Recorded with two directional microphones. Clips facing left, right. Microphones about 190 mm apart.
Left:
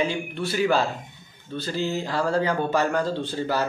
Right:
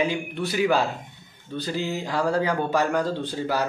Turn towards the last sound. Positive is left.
turn(degrees=-10)  # may be behind; listen again after turning